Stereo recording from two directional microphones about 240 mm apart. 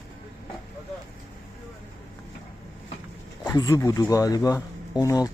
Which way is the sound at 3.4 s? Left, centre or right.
Centre.